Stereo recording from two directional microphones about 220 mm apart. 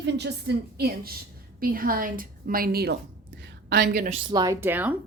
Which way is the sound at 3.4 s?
50° right (ahead or behind).